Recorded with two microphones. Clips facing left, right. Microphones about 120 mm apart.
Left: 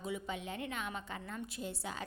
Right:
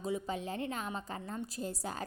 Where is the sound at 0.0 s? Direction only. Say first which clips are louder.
Right 4 dB; 35° right (ahead or behind).